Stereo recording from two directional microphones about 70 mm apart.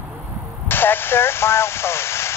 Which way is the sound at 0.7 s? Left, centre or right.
Left.